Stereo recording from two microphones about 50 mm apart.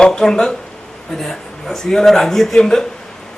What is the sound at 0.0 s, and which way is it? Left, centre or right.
A man's voice, centre.